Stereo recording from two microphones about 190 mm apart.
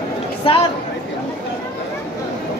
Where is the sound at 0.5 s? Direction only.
30° left (ahead or behind).